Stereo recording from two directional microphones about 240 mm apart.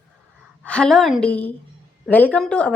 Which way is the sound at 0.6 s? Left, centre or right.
Centre.